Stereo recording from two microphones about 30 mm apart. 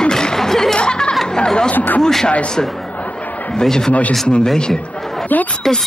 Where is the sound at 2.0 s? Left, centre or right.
Centre.